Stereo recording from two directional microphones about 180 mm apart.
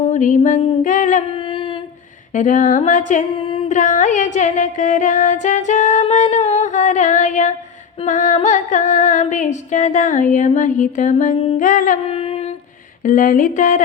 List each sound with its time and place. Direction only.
0.1 s female singing: 45° left (ahead or behind)
2.3 s female singing: 45° left (ahead or behind)
3.4 s carnatic music: 30° left (ahead or behind)
3.7 s music: 45° left (ahead or behind)
8.0 s female singing: 45° left (ahead or behind)
12.0 s a sound: 30° left (ahead or behind)
13.1 s female singing: 50° left (ahead or behind)